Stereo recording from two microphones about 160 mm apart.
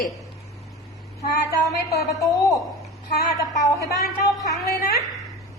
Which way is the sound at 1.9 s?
20° left (ahead or behind).